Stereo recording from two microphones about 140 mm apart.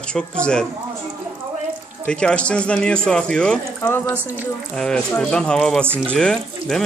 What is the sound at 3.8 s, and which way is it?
Speech, 15° left (ahead or behind).